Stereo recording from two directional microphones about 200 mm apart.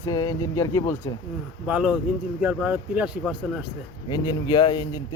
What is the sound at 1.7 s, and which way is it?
A man's voice, 5° right (ahead or behind).